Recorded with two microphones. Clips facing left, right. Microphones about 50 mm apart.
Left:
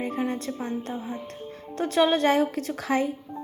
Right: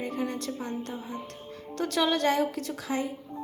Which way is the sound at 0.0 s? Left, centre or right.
Left.